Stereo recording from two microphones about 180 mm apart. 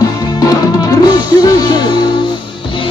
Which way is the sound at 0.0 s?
20° left (ahead or behind).